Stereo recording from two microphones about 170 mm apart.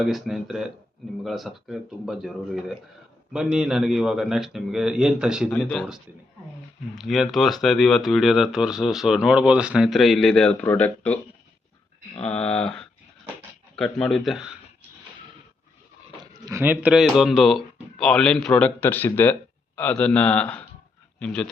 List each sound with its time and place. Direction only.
0.0 s speech: centre (ahead or behind)
7.0 s speech: centre (ahead or behind)
16.2 s speech: 15° right (ahead or behind); by 21.5 s 5° left (ahead or behind)